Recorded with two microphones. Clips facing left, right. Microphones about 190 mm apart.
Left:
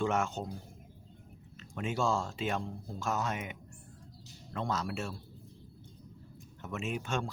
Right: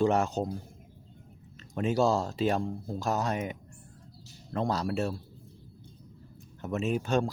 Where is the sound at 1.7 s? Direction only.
40° right (ahead or behind).